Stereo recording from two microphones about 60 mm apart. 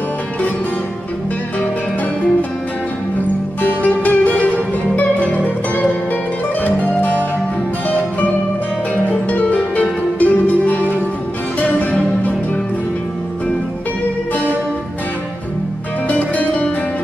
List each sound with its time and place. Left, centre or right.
3.6 s music: left
9.1 s music: left
11.8 s music: left
16.1 s music: left